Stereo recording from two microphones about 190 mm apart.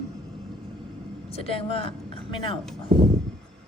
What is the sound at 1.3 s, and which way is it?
Speech, 30° left (ahead or behind).